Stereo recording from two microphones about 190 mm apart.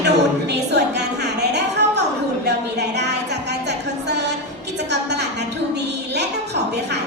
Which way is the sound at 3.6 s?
65° right (ahead or behind).